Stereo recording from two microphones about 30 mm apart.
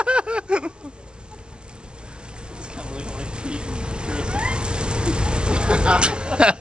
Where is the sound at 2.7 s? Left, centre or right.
Right.